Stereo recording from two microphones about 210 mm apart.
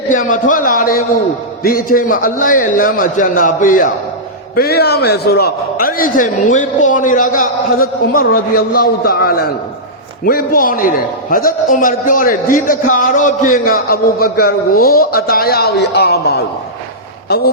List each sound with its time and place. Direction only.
0.1 s a man's voice: 40° left (ahead or behind)